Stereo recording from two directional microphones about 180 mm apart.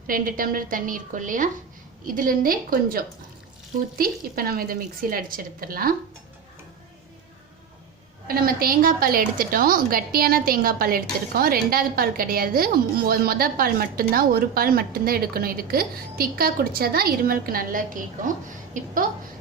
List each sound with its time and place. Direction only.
0.1 s a woman's voice: 50° right (ahead or behind)
8.3 s a woman's voice: 55° right (ahead or behind)